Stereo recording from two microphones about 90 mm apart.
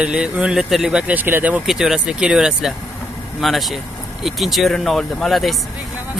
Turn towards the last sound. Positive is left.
turn(degrees=0)  # may be behind; listen again after turning